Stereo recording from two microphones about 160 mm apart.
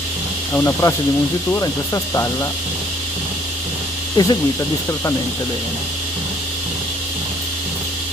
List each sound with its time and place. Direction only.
0.6 s speech: 15° left (ahead or behind)
4.2 s speech: 25° left (ahead or behind)